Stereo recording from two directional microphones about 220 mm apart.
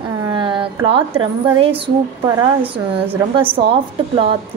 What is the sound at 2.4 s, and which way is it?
Speech, 10° right (ahead or behind).